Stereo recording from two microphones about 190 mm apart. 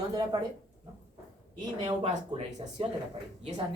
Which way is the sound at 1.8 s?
35° right (ahead or behind).